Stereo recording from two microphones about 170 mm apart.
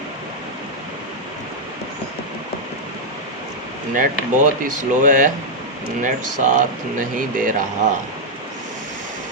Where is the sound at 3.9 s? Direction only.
50° right (ahead or behind).